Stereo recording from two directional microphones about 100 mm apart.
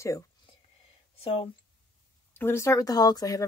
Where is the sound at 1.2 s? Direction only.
70° left (ahead or behind).